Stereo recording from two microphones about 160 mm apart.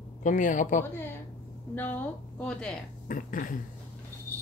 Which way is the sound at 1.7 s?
10° left (ahead or behind).